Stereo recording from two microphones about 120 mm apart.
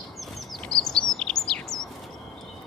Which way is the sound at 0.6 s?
5° left (ahead or behind).